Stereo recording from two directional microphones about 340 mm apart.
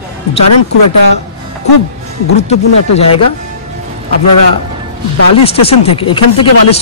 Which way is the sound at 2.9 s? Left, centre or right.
Left.